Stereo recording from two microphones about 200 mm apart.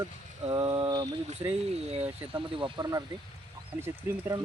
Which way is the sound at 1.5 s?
30° right (ahead or behind).